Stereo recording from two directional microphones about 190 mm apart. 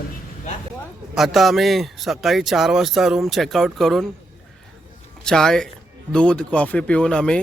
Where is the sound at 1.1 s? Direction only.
Centre (ahead or behind).